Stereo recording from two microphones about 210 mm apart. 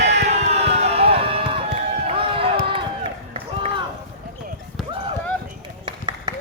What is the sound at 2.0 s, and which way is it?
Run, 25° right (ahead or behind).